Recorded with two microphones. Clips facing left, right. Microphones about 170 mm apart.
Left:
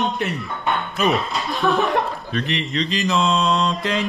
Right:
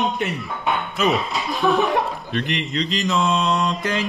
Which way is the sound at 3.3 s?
20° right (ahead or behind).